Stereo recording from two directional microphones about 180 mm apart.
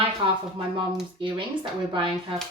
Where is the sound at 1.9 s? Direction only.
25° right (ahead or behind).